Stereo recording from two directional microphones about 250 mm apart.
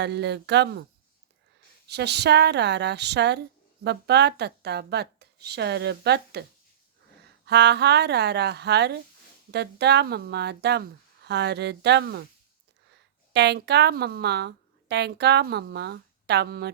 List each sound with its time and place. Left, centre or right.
0.0 s speech: right
1.9 s a woman's voice: right
7.4 s a woman's voice: right
13.3 s a woman's voice: right